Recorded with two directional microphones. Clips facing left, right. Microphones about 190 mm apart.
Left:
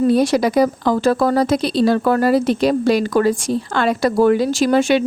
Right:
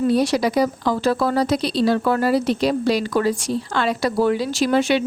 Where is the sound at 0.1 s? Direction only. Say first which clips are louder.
Left 3 dB; 50° left (ahead or behind).